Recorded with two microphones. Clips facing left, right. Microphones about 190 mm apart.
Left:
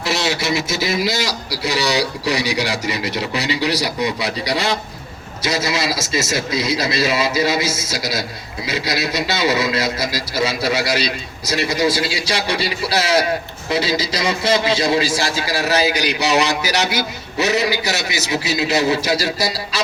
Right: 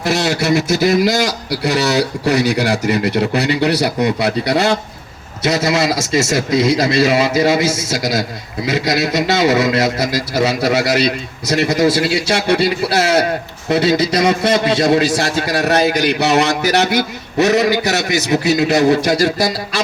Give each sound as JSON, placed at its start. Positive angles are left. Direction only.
{"t": 0.2, "sound": "a man's voice", "side_deg": -60}